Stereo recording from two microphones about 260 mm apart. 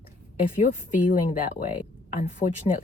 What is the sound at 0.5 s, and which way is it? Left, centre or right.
Speech, left.